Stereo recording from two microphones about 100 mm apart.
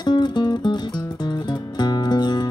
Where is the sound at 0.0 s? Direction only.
45° left (ahead or behind).